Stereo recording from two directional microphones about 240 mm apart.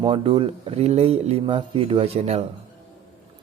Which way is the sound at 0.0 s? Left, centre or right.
Right.